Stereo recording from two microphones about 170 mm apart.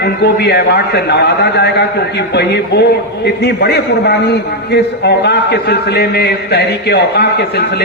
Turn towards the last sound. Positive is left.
turn(degrees=70)  # may be behind; listen again after turning